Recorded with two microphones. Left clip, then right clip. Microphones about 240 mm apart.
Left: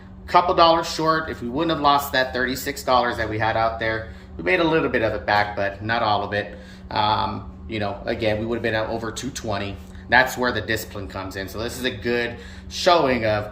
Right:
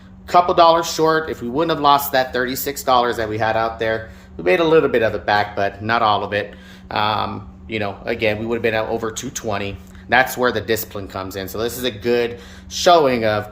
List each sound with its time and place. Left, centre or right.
0.5 s speech: right